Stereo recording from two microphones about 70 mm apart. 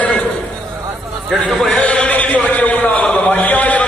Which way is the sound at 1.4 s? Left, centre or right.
Centre.